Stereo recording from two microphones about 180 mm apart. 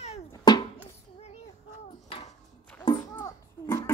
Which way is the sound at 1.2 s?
35° left (ahead or behind).